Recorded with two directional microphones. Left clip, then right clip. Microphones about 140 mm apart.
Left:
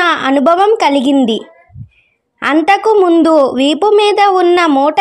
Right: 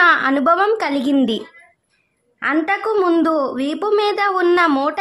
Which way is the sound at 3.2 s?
40° left (ahead or behind).